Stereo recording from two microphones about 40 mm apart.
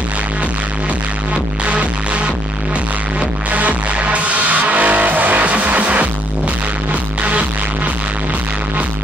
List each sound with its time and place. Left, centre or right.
1.7 s music: right
3.5 s music: right